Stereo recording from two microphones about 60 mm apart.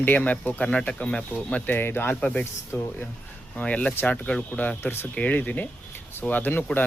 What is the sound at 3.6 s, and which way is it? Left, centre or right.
Speech, left.